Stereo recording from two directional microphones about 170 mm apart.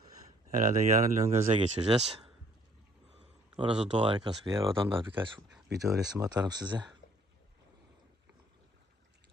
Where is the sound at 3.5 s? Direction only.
30° right (ahead or behind).